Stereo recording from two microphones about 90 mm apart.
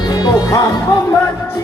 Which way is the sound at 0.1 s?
45° left (ahead or behind).